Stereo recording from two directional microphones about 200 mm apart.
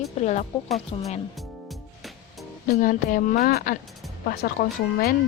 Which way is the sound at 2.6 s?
45° left (ahead or behind).